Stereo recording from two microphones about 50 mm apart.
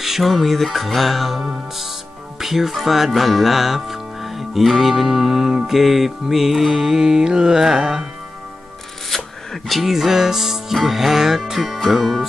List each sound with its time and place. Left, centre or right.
0.0 s speech: centre
1.4 s music: centre
2.3 s speech: centre
9.1 s speech: centre